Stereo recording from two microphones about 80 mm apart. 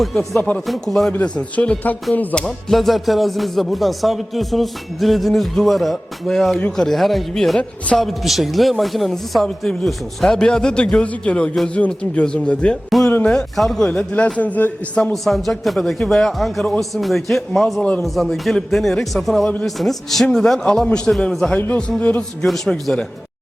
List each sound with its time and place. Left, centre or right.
0.0 s speech: centre
1.1 s speech: centre
2.4 s speech: centre
12.9 s a man's voice: centre
15.1 s speech: centre
22.4 s speech: centre